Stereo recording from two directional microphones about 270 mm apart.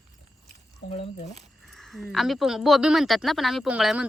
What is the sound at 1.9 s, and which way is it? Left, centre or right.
Speech, centre.